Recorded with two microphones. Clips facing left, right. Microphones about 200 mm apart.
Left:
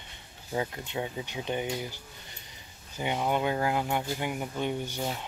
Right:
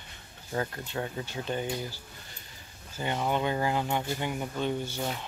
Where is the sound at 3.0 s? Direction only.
15° left (ahead or behind).